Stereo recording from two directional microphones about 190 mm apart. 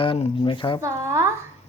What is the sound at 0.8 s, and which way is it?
Speech, 15° right (ahead or behind).